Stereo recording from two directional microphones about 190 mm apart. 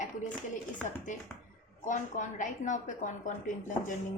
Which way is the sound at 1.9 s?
40° left (ahead or behind).